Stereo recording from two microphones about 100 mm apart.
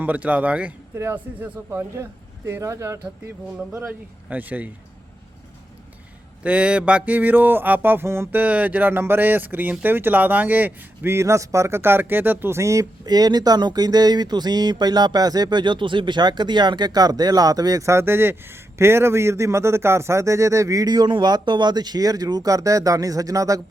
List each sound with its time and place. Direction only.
0.0 s speech: 15° right (ahead or behind); by 3.0 s 30° right (ahead or behind)
4.3 s speech: 15° right (ahead or behind)
6.4 s mantra: 10° right (ahead or behind); by 23.6 s 35° right (ahead or behind)